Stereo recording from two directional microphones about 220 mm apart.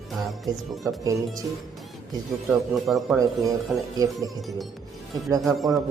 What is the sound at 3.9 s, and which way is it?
Speech, 15° right (ahead or behind).